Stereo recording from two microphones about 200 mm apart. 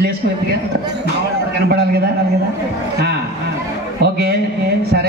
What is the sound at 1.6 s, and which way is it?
Speech, 50° right (ahead or behind).